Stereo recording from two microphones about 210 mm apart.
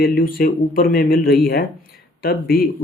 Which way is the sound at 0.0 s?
45° left (ahead or behind).